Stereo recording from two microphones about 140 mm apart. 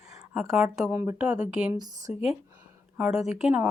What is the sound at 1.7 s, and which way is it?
Speech, 30° right (ahead or behind).